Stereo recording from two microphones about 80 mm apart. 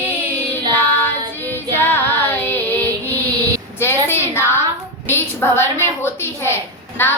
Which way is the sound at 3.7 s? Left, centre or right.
Left.